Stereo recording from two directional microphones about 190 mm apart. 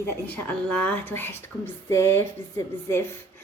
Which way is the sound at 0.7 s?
10° left (ahead or behind).